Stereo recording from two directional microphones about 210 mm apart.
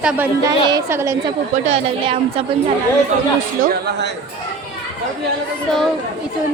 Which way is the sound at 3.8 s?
55° right (ahead or behind).